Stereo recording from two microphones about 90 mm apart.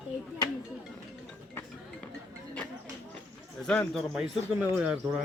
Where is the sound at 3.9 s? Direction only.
5° right (ahead or behind).